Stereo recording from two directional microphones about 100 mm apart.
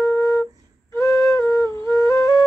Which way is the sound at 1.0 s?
30° left (ahead or behind).